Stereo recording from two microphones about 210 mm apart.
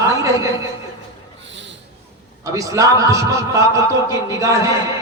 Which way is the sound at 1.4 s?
60° right (ahead or behind).